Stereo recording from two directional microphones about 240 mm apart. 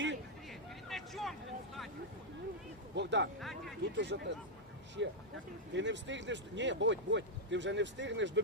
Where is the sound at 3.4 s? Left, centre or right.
Centre.